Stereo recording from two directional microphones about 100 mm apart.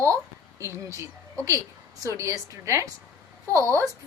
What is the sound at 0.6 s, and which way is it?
A woman's voice, 30° right (ahead or behind).